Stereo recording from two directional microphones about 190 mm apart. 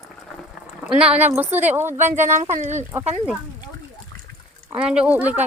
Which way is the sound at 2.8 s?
15° right (ahead or behind).